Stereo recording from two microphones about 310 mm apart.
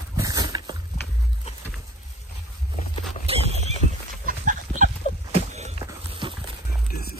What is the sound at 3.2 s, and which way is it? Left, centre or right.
Horse, centre.